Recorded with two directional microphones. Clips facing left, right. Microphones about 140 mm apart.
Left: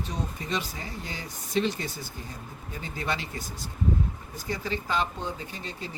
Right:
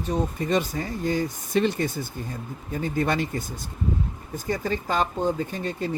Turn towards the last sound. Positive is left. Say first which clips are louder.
# right 9 dB
turn(degrees=-50)  # may be behind; listen again after turning